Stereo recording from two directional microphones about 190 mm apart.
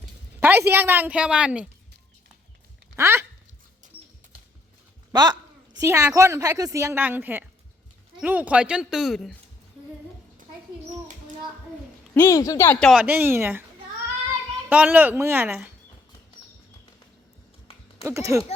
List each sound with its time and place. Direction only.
0.3 s a woman's voice: 10° right (ahead or behind)
2.9 s speech: 15° right (ahead or behind)
3.9 s a sound: 10° right (ahead or behind)
5.1 s a sound: 20° right (ahead or behind)
6.1 s a woman's voice: 15° right (ahead or behind)
12.1 s speech: 15° left (ahead or behind)
12.9 s a woman's voice: 5° right (ahead or behind)
14.7 s a woman's voice: 10° right (ahead or behind)
18.0 s a woman's voice: 15° right (ahead or behind)